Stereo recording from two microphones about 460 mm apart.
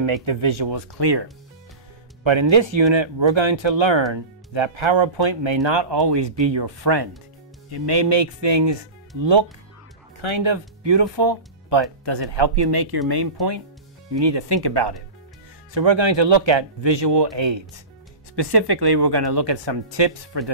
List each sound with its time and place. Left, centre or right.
0.0 s speech: right
2.5 s speech: right
15.7 s speech: right
18.3 s speech: right